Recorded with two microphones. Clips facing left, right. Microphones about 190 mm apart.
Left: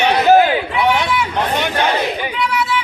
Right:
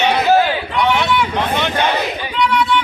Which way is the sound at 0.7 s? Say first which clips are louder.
Even; 5° left (ahead or behind).